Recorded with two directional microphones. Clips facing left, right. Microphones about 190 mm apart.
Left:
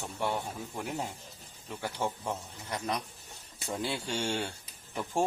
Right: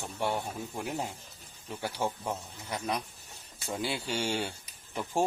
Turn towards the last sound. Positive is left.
turn(degrees=0)  # may be behind; listen again after turning